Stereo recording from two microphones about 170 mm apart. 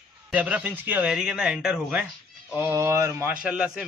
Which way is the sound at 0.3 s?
10° right (ahead or behind).